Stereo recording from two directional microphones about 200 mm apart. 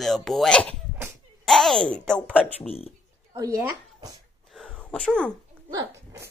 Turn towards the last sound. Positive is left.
turn(degrees=-15)  # may be behind; listen again after turning